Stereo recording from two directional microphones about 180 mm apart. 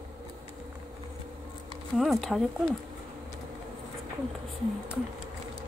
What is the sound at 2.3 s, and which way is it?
Speech, 5° left (ahead or behind).